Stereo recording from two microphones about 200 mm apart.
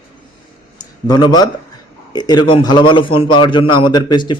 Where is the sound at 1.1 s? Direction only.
20° left (ahead or behind).